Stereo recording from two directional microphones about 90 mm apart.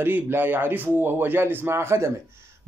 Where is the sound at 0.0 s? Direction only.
20° right (ahead or behind).